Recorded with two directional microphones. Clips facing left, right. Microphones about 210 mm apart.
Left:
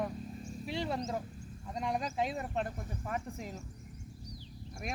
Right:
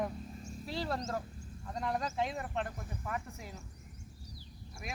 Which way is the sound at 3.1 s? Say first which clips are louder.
Left 3 dB; 30° left (ahead or behind).